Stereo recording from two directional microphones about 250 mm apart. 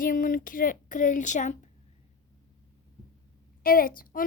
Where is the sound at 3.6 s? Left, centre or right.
Left.